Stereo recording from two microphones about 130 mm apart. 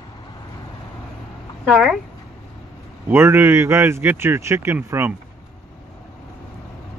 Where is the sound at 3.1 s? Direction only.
15° right (ahead or behind).